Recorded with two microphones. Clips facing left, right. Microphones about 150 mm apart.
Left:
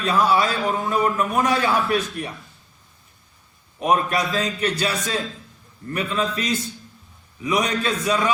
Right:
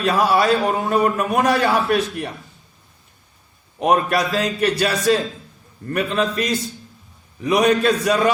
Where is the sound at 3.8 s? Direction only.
70° right (ahead or behind).